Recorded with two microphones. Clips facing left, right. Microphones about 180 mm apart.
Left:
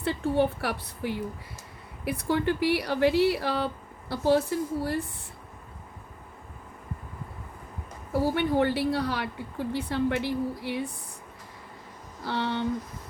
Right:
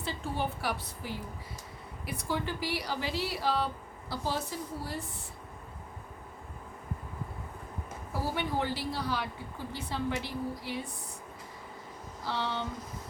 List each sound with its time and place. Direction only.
0.0 s speech: 60° left (ahead or behind)
8.4 s speech: 65° left (ahead or behind)
12.2 s speech: 60° left (ahead or behind)